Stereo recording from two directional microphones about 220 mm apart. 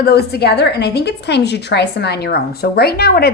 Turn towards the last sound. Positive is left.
turn(degrees=45)  # may be behind; listen again after turning